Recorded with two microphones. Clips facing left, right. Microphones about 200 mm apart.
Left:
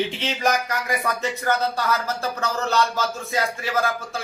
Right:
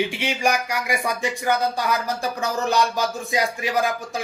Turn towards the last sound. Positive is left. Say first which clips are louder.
# right 1 dB
turn(degrees=-15)  # may be behind; listen again after turning